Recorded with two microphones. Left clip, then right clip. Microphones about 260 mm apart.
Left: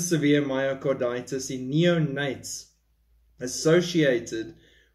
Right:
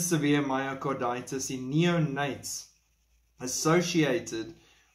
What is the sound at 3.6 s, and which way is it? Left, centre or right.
Speech, centre.